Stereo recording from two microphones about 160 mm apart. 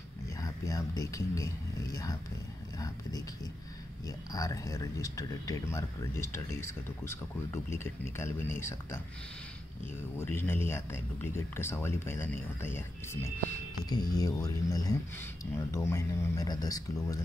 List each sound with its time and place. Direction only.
0.4 s speech: 20° left (ahead or behind)
4.3 s speech: 20° left (ahead or behind)
10.1 s speech: 15° left (ahead or behind)